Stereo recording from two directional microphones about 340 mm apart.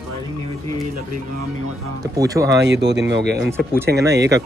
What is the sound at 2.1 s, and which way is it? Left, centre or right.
Speech, centre.